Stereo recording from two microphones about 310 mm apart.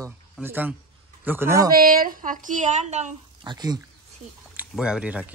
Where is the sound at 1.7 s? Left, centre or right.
Right.